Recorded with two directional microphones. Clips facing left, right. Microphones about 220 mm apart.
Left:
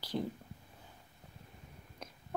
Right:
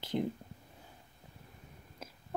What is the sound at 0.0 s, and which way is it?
Speech, 20° right (ahead or behind).